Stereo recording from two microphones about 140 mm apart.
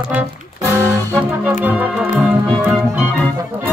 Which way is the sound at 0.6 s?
20° right (ahead or behind).